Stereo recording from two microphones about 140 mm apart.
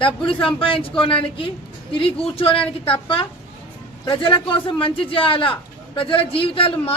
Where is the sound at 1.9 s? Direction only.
40° left (ahead or behind).